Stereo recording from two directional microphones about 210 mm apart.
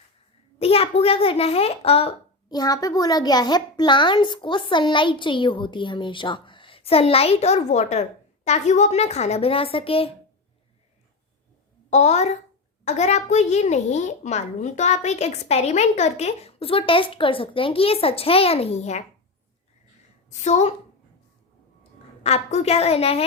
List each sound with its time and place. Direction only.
0.6 s a child's voice: 30° left (ahead or behind)
11.9 s a child's voice: 35° left (ahead or behind)
20.3 s a child's voice: 35° left (ahead or behind)
22.2 s a child's voice: 30° left (ahead or behind)